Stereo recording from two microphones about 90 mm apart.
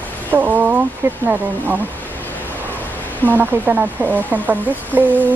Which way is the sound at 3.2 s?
20° right (ahead or behind).